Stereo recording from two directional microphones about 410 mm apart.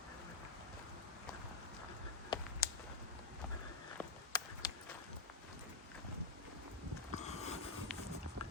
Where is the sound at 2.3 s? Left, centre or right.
Centre.